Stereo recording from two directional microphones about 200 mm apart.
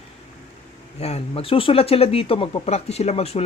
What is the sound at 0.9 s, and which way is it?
Speech, 30° left (ahead or behind).